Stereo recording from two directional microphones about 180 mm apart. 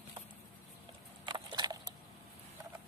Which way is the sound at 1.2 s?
25° right (ahead or behind).